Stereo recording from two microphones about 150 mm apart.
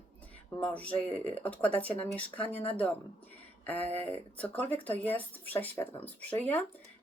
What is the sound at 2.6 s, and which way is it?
Speech, 40° left (ahead or behind).